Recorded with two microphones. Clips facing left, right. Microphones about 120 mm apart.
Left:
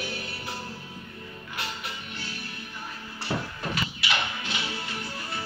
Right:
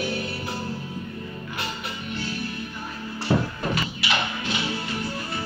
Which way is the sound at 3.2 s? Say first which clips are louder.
Right 7 dB; 55° right (ahead or behind).